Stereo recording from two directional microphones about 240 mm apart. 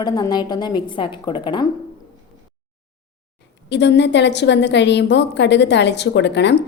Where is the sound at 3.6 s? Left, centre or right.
Left.